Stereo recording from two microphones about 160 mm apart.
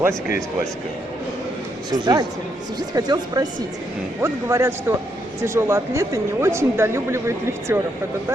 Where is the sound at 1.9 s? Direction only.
25° right (ahead or behind).